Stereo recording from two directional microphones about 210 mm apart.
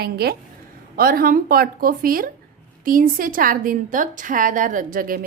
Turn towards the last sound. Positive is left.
turn(degrees=-40)  # may be behind; listen again after turning